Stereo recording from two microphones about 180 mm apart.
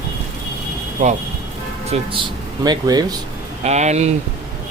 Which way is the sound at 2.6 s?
20° right (ahead or behind).